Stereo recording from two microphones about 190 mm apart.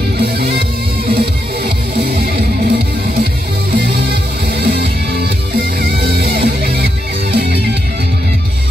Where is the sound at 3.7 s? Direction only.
60° right (ahead or behind).